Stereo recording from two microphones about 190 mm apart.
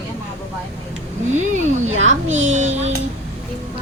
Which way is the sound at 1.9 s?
90° right.